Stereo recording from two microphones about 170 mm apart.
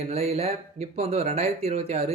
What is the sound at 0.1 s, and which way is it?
Speech, 35° right (ahead or behind).